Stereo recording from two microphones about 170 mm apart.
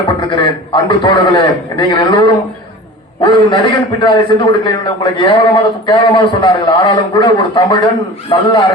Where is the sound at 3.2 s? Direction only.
25° left (ahead or behind).